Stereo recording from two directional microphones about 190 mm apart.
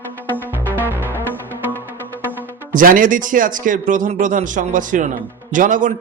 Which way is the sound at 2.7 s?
45° right (ahead or behind).